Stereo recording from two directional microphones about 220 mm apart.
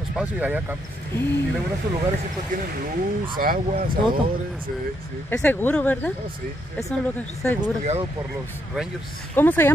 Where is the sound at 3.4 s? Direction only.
40° right (ahead or behind).